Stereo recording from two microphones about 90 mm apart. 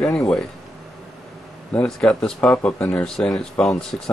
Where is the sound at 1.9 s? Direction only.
5° left (ahead or behind).